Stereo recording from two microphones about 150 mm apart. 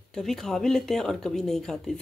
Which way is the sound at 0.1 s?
5° left (ahead or behind).